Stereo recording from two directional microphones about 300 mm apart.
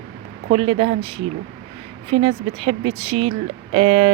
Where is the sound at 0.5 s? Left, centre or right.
Centre.